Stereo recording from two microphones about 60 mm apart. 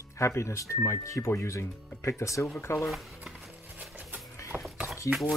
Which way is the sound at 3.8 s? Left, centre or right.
Right.